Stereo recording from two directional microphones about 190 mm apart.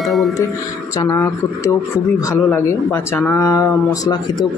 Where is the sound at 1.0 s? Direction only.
15° left (ahead or behind).